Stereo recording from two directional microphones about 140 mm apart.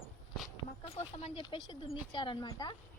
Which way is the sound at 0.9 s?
45° left (ahead or behind).